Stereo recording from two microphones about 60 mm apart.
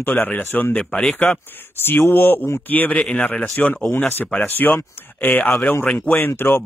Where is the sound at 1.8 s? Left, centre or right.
Left.